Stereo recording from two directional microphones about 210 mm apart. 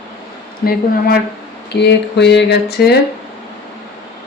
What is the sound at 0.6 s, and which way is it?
Speech, 45° left (ahead or behind).